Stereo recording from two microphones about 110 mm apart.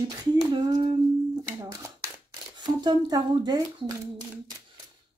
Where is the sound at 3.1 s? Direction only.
35° right (ahead or behind).